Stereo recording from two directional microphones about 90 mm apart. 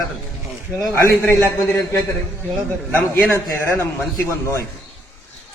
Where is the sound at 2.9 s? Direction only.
20° left (ahead or behind).